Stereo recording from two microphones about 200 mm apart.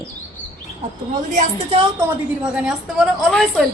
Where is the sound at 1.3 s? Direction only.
30° right (ahead or behind).